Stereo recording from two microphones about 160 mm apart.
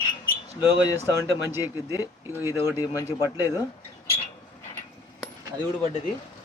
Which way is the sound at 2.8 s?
20° left (ahead or behind).